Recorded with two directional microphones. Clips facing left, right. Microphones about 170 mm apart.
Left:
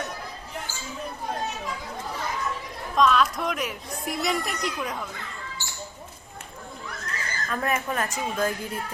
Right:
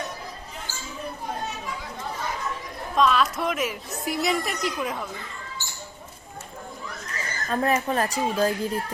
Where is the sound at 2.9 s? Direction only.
Centre (ahead or behind).